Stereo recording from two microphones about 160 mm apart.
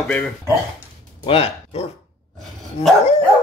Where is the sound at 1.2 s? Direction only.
35° left (ahead or behind).